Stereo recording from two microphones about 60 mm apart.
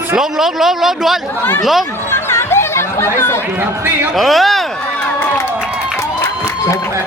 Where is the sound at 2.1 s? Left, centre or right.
Left.